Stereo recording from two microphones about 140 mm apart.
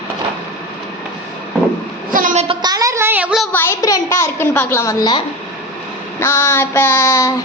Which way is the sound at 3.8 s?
25° left (ahead or behind).